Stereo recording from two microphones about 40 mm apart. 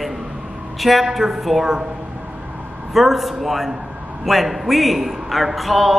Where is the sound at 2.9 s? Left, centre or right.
Centre.